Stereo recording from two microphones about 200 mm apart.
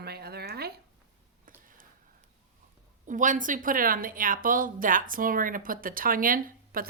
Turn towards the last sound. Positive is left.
turn(degrees=-45)  # may be behind; listen again after turning